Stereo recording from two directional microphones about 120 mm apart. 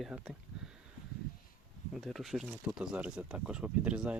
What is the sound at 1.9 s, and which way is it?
Speech, centre (ahead or behind).